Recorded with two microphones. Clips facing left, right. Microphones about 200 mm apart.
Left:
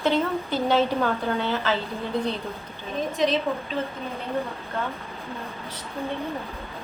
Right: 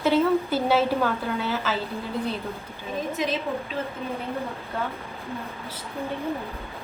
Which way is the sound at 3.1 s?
5° right (ahead or behind).